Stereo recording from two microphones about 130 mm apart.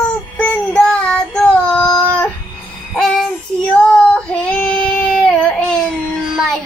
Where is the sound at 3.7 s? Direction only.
5° left (ahead or behind).